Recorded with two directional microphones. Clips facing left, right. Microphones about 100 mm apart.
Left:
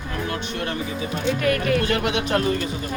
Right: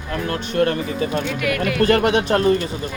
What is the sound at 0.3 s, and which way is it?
Speech, 45° right (ahead or behind).